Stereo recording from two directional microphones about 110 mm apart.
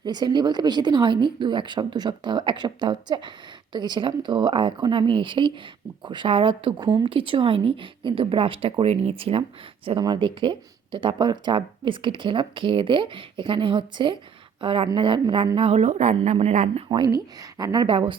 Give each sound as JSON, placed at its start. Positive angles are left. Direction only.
{"t": 0.0, "sound": "speech", "side_deg": -40}
{"t": 10.0, "sound": "a woman's voice", "side_deg": -45}
{"t": 15.5, "sound": "speech", "side_deg": -70}
{"t": 17.1, "sound": "a woman's voice", "side_deg": -35}
{"t": 17.8, "sound": "speech", "side_deg": -55}